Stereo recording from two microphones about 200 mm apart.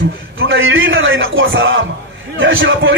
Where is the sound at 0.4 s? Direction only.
75° right (ahead or behind).